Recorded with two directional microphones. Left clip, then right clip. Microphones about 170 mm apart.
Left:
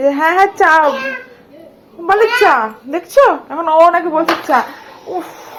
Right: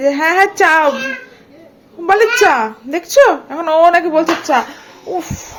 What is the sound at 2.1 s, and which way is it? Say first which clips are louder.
Speech: even; 40° right (ahead or behind).